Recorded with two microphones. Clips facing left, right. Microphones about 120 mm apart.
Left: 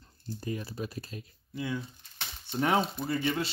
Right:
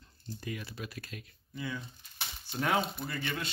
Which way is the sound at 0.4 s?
35° left (ahead or behind).